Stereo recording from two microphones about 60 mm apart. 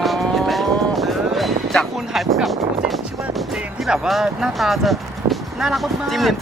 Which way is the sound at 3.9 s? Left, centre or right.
Centre.